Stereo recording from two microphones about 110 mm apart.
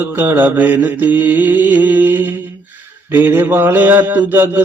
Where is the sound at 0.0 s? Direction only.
20° right (ahead or behind).